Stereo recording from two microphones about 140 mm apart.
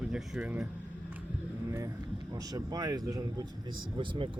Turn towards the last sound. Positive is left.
turn(degrees=-35)  # may be behind; listen again after turning